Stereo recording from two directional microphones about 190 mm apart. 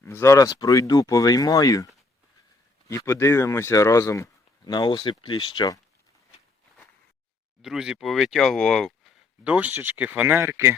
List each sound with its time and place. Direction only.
0.0 s speech: 15° left (ahead or behind)
7.6 s speech: 5° right (ahead or behind)